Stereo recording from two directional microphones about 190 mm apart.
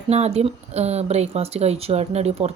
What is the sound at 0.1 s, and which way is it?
Speech, 35° right (ahead or behind).